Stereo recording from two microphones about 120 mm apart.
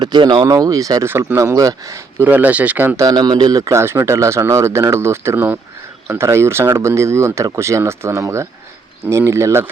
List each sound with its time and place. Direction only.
0.0 s speech: 40° right (ahead or behind); by 9.6 s 20° right (ahead or behind)